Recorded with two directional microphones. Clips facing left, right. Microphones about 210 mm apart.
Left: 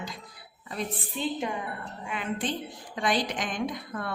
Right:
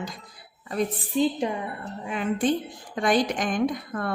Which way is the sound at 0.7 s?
35° right (ahead or behind).